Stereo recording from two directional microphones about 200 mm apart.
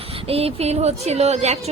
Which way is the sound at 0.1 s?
30° right (ahead or behind).